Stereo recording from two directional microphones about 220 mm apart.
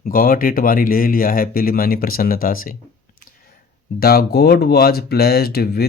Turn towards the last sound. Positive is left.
turn(degrees=45)  # may be behind; listen again after turning